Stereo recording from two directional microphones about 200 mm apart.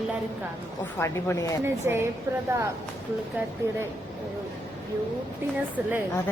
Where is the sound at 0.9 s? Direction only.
15° left (ahead or behind).